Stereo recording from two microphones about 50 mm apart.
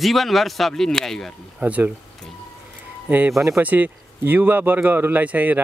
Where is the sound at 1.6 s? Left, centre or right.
Right.